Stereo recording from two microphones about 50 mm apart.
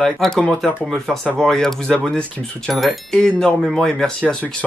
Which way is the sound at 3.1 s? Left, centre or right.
Centre.